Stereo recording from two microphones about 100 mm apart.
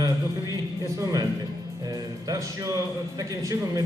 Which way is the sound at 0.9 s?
35° right (ahead or behind).